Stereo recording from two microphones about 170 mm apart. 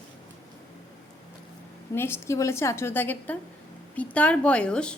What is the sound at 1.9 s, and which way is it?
A woman's voice, 15° left (ahead or behind).